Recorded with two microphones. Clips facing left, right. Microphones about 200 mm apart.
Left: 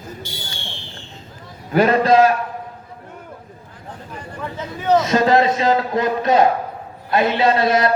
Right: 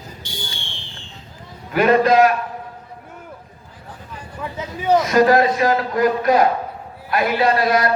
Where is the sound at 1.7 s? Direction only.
30° left (ahead or behind).